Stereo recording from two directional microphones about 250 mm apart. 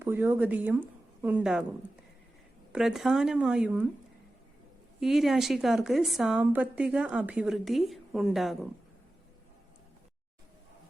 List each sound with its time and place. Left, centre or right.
0.0 s speech: centre
2.7 s a woman's voice: centre
4.9 s a woman's voice: centre